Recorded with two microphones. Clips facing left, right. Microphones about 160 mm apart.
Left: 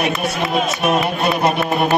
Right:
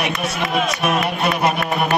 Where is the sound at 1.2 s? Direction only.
25° left (ahead or behind).